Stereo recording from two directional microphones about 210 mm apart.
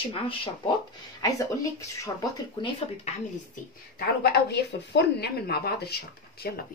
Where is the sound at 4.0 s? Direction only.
50° left (ahead or behind).